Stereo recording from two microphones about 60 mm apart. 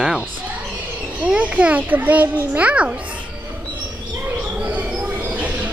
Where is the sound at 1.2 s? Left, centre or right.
Right.